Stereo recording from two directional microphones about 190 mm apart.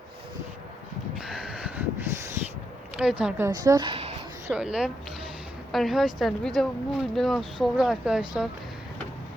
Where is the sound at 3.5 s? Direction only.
20° right (ahead or behind).